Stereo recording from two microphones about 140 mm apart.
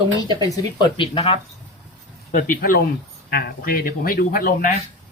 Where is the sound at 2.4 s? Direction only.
80° left.